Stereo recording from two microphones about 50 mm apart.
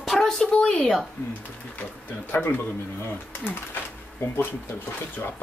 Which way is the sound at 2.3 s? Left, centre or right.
Left.